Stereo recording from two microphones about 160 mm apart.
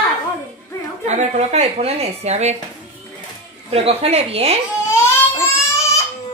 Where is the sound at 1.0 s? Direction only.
45° right (ahead or behind).